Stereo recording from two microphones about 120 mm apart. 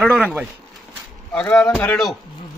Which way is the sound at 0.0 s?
5° left (ahead or behind).